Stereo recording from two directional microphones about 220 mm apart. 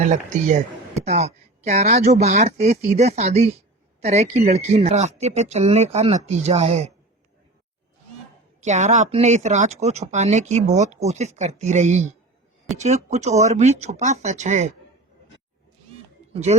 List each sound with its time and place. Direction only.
0.0 s speech: 35° right (ahead or behind)
8.6 s speech: 30° right (ahead or behind)
16.3 s speech: 30° right (ahead or behind)